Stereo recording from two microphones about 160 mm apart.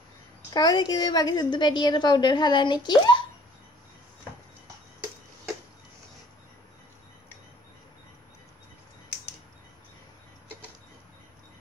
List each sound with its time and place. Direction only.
0.5 s a woman's voice: 25° left (ahead or behind)